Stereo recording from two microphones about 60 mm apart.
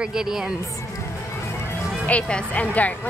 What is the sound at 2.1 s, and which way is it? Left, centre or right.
Speech, centre.